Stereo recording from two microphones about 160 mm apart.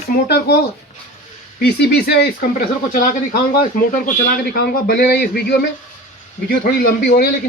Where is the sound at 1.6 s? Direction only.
90° left.